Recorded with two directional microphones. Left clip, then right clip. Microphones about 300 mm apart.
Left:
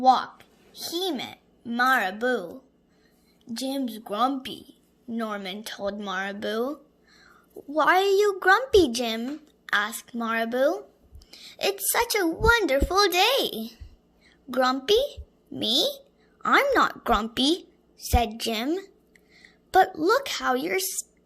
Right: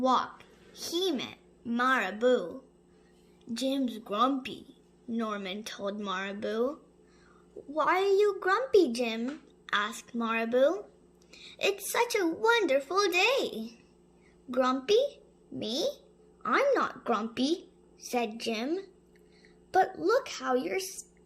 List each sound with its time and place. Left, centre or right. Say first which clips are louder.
0.0 s a woman's voice: left 7 dB; centre; by 20.8 s left